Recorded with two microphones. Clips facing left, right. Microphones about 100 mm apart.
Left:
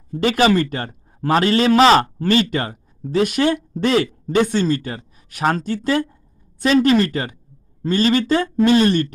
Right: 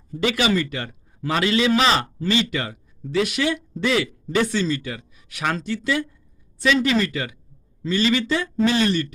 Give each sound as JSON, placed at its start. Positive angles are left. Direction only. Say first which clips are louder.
{"t": 0.2, "sound": "a man's voice", "louder": "left 5 dB", "side_deg": 40}